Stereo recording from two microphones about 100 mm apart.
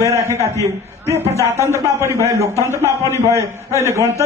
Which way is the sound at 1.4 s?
25° left (ahead or behind).